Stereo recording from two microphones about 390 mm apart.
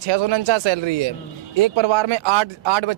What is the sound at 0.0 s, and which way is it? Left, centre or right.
Speech, right.